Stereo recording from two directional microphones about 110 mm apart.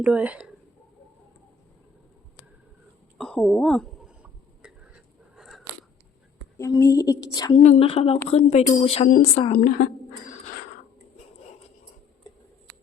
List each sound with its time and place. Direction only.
0.0 s speech: 10° right (ahead or behind)
3.2 s a woman's voice: 10° left (ahead or behind)
4.2 s a sound: 10° right (ahead or behind)
6.6 s a woman's voice: 30° left (ahead or behind)
7.5 s a woman's voice: 85° left; by 8.2 s 60° left (ahead or behind)
8.3 s a woman's voice: 85° left; by 9.5 s 65° left (ahead or behind)